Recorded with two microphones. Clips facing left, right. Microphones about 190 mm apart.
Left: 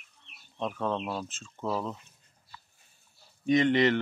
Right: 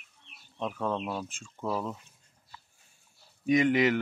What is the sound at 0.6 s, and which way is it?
Speech, 10° right (ahead or behind).